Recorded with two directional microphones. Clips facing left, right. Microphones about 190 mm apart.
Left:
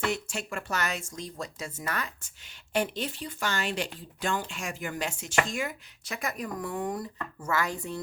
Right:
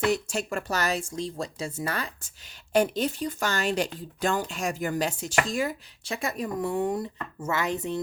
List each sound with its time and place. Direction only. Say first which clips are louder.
0.0 s speech: right 5 dB; 40° right (ahead or behind); by 8.0 s 20° right (ahead or behind)